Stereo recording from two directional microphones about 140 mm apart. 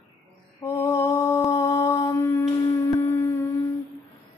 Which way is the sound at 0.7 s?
20° left (ahead or behind).